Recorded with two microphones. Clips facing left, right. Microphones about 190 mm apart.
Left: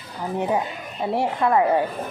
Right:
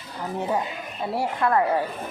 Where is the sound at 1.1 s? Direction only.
20° left (ahead or behind).